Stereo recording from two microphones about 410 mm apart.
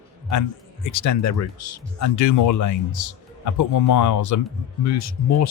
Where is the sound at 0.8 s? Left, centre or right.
Left.